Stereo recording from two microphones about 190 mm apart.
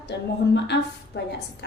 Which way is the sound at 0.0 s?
60° left (ahead or behind).